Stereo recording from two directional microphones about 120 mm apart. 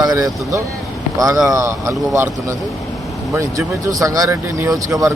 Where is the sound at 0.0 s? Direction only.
30° right (ahead or behind).